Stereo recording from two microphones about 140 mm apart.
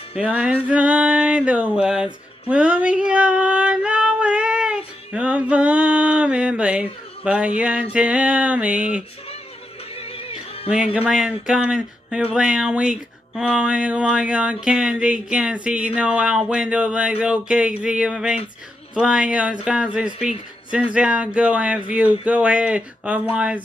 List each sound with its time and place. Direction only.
0.7 s speech: 10° right (ahead or behind)
2.5 s female singing: 10° right (ahead or behind)
7.9 s speech: 10° right (ahead or behind)
9.9 s music: 40° left (ahead or behind)
10.7 s speech: 5° right (ahead or behind)